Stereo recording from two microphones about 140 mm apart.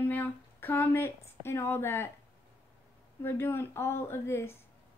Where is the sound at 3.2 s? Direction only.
15° left (ahead or behind).